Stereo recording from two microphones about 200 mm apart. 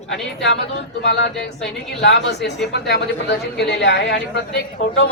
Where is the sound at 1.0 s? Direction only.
60° left (ahead or behind).